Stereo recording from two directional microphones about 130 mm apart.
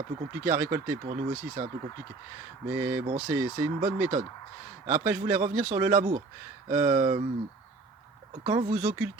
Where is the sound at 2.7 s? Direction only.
15° right (ahead or behind).